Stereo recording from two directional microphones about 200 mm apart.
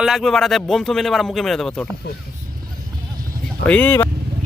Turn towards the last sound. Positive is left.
turn(degrees=10)  # may be behind; listen again after turning